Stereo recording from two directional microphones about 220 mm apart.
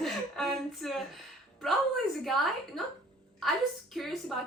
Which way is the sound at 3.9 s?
Centre (ahead or behind).